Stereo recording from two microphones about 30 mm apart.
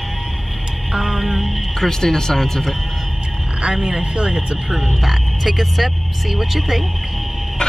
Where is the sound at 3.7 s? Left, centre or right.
Right.